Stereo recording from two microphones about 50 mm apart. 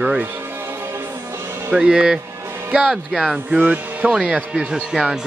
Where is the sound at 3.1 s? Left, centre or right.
Centre.